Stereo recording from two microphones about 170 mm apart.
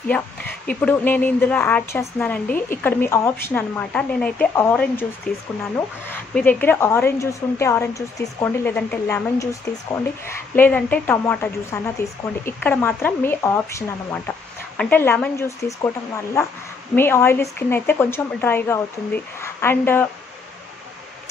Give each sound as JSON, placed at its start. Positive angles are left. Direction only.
{"t": 0.1, "sound": "speech", "side_deg": 10}
{"t": 5.3, "sound": "speech", "side_deg": 55}
{"t": 6.0, "sound": "speech", "side_deg": 10}
{"t": 16.9, "sound": "speech", "side_deg": 15}